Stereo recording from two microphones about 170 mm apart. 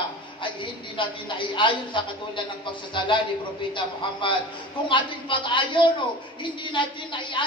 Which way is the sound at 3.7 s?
30° left (ahead or behind).